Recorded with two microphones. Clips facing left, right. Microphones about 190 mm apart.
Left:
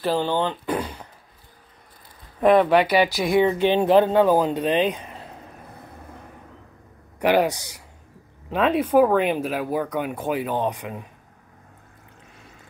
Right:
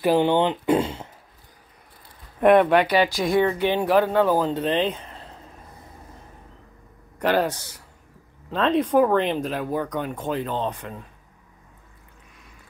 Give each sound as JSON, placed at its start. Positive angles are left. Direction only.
{"t": 0.0, "sound": "speech", "side_deg": -20}
{"t": 2.6, "sound": "speech", "side_deg": 10}
{"t": 7.2, "sound": "speech", "side_deg": 10}